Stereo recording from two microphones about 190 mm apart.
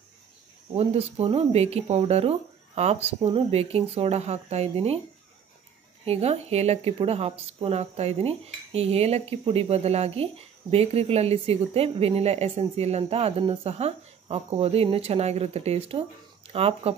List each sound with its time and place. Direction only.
0.7 s cutlery: 30° right (ahead or behind)
6.0 s cutlery: 35° right (ahead or behind)